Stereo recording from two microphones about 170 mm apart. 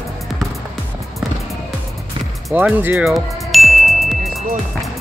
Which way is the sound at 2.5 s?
10° right (ahead or behind).